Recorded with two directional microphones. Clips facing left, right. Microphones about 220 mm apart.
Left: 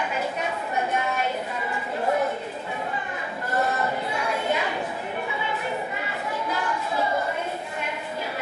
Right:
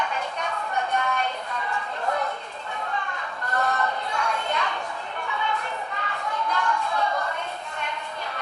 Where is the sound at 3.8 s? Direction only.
5° left (ahead or behind).